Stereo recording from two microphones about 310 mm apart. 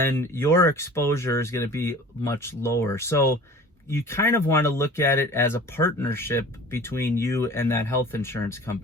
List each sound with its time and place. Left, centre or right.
0.0 s speech: centre